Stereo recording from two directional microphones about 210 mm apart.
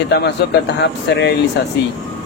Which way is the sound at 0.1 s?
55° left (ahead or behind).